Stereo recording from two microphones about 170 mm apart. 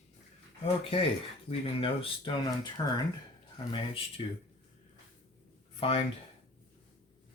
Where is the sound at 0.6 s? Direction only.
35° left (ahead or behind).